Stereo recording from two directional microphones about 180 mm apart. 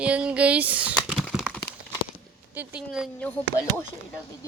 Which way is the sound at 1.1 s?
Centre (ahead or behind).